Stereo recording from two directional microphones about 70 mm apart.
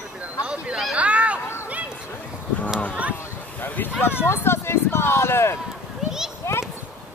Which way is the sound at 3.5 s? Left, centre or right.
Left.